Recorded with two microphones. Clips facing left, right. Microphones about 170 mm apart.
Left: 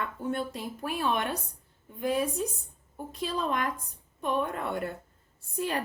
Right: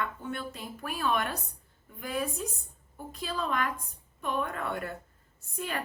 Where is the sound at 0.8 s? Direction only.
25° left (ahead or behind).